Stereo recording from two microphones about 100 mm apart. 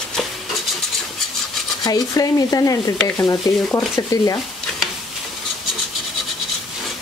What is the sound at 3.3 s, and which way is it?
Speech, centre (ahead or behind).